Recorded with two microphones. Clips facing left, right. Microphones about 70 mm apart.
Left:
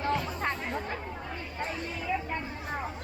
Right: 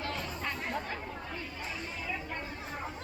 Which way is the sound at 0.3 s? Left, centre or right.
Left.